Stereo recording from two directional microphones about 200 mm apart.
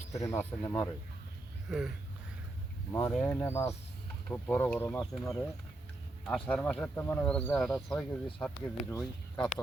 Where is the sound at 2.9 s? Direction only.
10° left (ahead or behind).